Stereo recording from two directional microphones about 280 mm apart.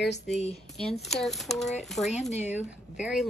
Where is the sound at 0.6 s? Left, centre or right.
Centre.